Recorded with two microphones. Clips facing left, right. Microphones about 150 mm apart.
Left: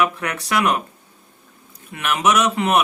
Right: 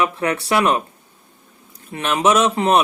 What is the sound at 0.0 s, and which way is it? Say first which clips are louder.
Speech: right 2 dB; 30° right (ahead or behind).